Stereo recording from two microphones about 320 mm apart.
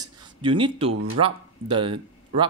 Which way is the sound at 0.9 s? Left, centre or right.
Right.